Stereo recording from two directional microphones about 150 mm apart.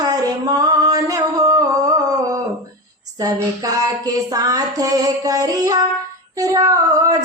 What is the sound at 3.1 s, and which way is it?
Female singing, 25° right (ahead or behind).